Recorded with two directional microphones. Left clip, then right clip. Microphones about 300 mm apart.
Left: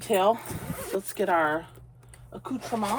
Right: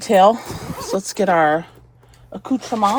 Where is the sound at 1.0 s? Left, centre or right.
Centre.